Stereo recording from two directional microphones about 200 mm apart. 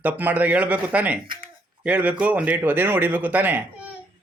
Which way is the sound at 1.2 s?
25° right (ahead or behind).